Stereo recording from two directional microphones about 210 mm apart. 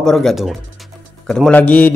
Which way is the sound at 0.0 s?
Centre (ahead or behind).